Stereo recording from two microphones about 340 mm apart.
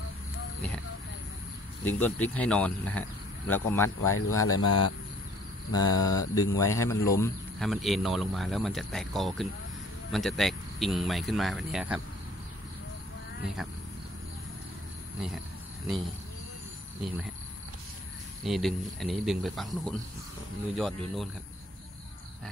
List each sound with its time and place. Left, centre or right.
1.9 s speech: centre
4.0 s speech: left
5.7 s speech: centre
18.4 s speech: centre